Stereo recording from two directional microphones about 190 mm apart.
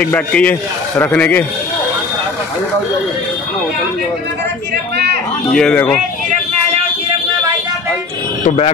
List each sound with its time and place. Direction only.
0.0 s a man's voice: 5° left (ahead or behind)
5.5 s speech: 5° left (ahead or behind)
8.5 s speech: 35° left (ahead or behind)